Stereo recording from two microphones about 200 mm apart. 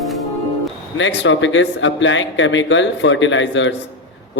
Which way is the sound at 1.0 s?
65° left (ahead or behind).